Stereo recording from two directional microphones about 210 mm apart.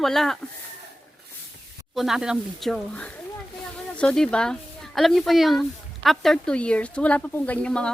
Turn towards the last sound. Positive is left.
turn(degrees=5)  # may be behind; listen again after turning